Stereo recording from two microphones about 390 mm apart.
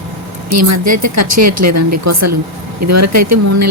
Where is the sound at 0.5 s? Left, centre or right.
Right.